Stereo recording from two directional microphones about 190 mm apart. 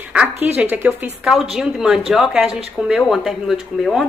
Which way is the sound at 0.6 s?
5° right (ahead or behind).